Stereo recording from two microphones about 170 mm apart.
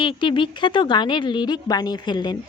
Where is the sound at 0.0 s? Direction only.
30° left (ahead or behind).